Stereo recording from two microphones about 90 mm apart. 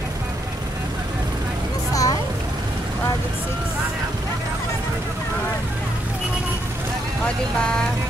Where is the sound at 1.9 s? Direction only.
40° left (ahead or behind).